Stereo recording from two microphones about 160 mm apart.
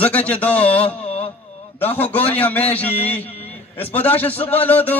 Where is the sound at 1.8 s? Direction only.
10° left (ahead or behind).